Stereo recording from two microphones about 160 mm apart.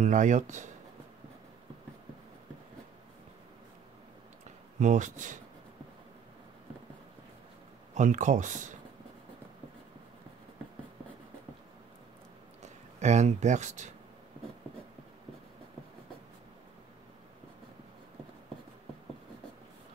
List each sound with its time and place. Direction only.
0.0 s speech: 50° right (ahead or behind)
4.7 s speech: 50° right (ahead or behind)
7.9 s speech: 50° right (ahead or behind)
12.6 s speech: 45° right (ahead or behind)